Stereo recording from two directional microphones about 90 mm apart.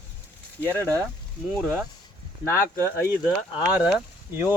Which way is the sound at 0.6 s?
20° left (ahead or behind).